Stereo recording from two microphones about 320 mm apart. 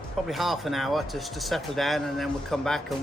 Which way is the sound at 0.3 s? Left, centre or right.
Centre.